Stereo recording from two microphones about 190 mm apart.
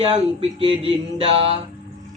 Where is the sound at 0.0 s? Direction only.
30° right (ahead or behind).